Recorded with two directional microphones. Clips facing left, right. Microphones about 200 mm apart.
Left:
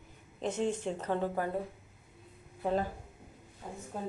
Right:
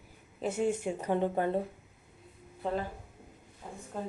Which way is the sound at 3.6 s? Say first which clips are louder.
Left 1 dB; 10° left (ahead or behind).